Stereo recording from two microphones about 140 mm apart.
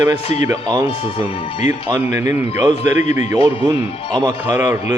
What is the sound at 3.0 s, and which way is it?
Speech, 60° left (ahead or behind).